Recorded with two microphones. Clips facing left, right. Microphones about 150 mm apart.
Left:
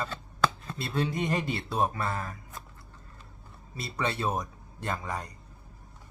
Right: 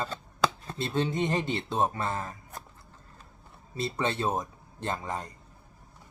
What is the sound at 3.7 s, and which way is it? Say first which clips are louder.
Speech: right 2 dB; 25° right (ahead or behind).